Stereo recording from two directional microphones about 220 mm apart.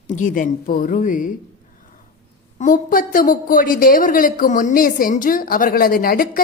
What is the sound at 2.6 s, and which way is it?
A woman's voice, 40° left (ahead or behind).